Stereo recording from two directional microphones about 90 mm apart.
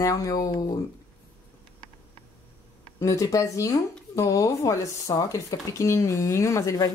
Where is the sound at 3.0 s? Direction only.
35° left (ahead or behind).